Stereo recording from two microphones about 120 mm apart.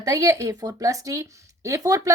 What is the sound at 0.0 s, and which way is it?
Speech, 30° right (ahead or behind).